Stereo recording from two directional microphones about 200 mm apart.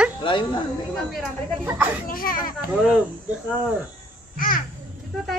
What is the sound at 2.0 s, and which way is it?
Speech, 45° left (ahead or behind).